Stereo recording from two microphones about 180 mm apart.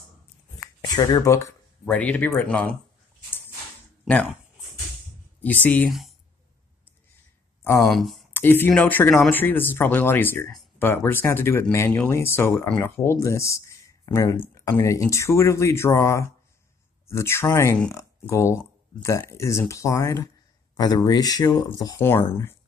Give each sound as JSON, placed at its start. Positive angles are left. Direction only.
{"t": 0.8, "sound": "speech", "side_deg": 20}
{"t": 1.9, "sound": "speech", "side_deg": 5}
{"t": 4.1, "sound": "speech", "side_deg": 5}
{"t": 5.4, "sound": "speech", "side_deg": 10}
{"t": 7.9, "sound": "speech", "side_deg": 0}
{"t": 8.3, "sound": "speech", "side_deg": 10}